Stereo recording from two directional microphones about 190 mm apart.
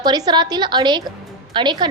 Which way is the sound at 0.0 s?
20° right (ahead or behind).